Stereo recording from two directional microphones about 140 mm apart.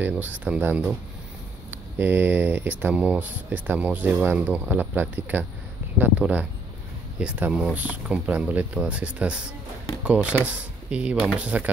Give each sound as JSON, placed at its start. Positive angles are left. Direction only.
{"t": 0.0, "sound": "speech", "side_deg": -10}